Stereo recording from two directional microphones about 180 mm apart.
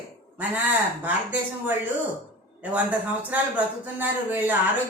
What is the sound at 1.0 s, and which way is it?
A man's voice, 10° right (ahead or behind).